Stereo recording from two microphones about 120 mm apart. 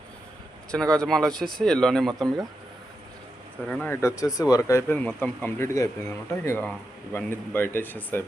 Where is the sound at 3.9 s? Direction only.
25° left (ahead or behind).